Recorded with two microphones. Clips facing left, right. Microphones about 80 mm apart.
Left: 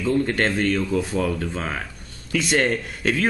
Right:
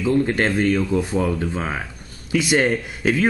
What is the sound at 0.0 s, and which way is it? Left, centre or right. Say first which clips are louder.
A man's voice: right 2 dB; centre.